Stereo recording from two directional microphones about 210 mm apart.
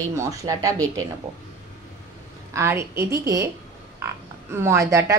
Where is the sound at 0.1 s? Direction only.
15° right (ahead or behind).